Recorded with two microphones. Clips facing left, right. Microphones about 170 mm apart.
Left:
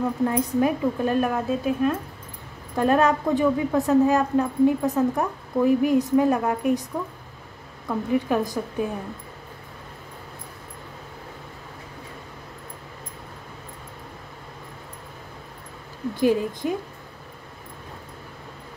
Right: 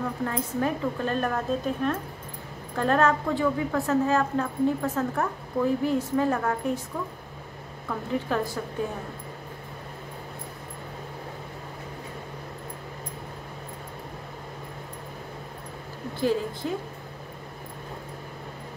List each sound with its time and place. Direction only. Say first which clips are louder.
0.2 s a woman's voice: left 7 dB; 15° left (ahead or behind)
7.9 s a woman's voice: left 5 dB; 15° left (ahead or behind)
16.2 s a woman's voice: left 4 dB; 15° left (ahead or behind)